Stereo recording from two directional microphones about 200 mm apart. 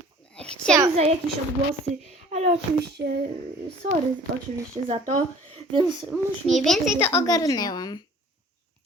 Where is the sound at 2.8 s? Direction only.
55° right (ahead or behind).